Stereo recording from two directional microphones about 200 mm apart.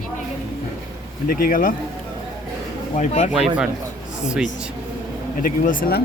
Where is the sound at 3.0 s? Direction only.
35° left (ahead or behind).